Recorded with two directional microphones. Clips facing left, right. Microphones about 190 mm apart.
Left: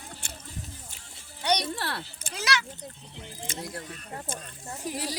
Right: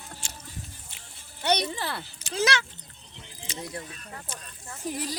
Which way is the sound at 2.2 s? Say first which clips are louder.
Right 6 dB; 50° left (ahead or behind).